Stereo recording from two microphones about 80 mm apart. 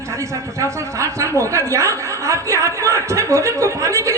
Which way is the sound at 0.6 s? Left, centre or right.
Right.